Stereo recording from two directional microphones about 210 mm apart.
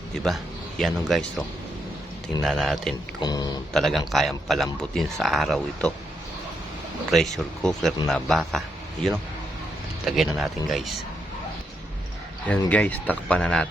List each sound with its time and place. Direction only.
0.8 s a man's voice: centre (ahead or behind)
3.2 s speech: 20° left (ahead or behind)
3.7 s a man's voice: centre (ahead or behind)
7.1 s a man's voice: centre (ahead or behind)
12.5 s speech: 5° left (ahead or behind)